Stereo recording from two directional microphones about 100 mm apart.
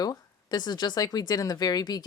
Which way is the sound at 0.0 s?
40° left (ahead or behind).